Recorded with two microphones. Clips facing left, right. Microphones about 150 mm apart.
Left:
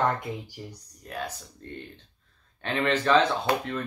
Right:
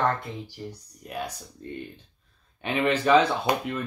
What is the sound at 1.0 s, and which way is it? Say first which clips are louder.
Speech: right 1 dB; 10° right (ahead or behind).